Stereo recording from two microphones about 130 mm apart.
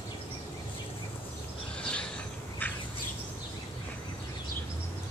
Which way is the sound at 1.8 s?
10° left (ahead or behind).